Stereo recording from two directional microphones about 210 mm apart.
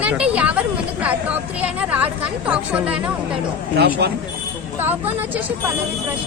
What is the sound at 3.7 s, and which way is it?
Speech, 50° right (ahead or behind).